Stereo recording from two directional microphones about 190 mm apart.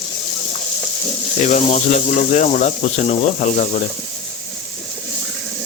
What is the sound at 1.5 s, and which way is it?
Speech, 40° left (ahead or behind).